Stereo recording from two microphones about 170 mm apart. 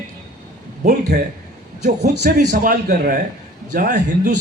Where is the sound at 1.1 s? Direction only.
65° right (ahead or behind).